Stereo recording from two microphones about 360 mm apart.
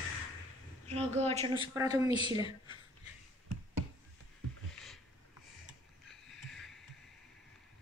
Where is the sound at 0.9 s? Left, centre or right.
Centre.